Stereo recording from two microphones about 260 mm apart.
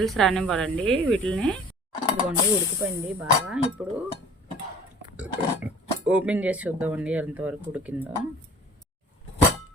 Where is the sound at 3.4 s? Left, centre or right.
Centre.